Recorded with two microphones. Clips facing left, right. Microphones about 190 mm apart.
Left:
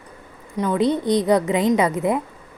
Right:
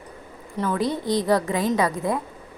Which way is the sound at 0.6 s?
20° left (ahead or behind).